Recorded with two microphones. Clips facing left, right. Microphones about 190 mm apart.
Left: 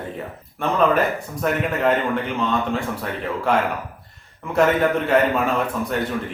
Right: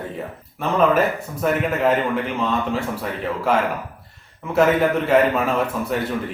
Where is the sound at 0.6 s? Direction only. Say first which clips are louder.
Right 1 dB; 5° right (ahead or behind).